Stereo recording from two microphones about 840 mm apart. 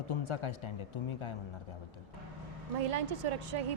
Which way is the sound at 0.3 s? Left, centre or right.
Left.